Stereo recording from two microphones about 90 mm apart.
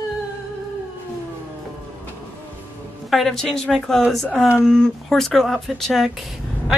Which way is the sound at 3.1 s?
5° left (ahead or behind).